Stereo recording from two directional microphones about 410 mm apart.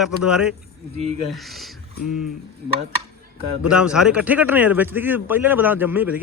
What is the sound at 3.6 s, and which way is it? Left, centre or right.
A man's voice, centre.